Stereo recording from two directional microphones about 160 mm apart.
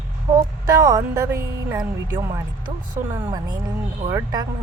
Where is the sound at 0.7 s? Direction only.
20° right (ahead or behind).